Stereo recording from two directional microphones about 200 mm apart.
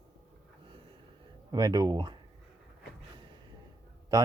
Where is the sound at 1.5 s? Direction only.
20° right (ahead or behind).